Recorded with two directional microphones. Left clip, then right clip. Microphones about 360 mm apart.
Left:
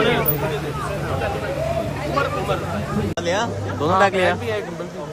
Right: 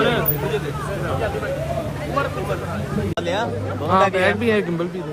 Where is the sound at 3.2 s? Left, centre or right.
Left.